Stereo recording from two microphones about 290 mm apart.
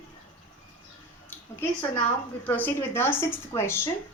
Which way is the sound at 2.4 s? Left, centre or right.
Centre.